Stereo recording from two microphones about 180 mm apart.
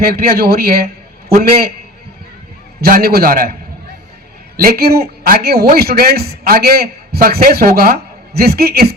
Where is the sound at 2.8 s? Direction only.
55° right (ahead or behind).